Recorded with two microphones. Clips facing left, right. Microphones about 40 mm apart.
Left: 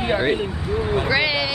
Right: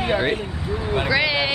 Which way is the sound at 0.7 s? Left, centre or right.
Centre.